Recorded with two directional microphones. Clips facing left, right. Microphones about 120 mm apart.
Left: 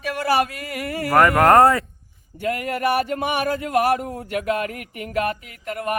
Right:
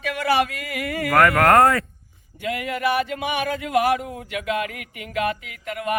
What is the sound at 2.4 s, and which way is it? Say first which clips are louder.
A man's voice: left 2 dB; 40° left (ahead or behind).